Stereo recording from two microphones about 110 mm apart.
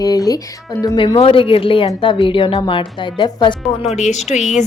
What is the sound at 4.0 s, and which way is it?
Speech, 90° left.